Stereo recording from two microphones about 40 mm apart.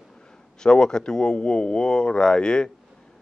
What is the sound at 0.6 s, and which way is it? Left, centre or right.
Speech, centre.